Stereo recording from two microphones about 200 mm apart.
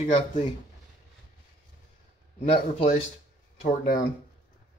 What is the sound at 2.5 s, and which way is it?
Speech, 35° left (ahead or behind).